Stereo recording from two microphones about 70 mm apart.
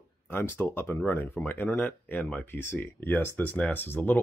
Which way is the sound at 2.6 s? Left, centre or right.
Left.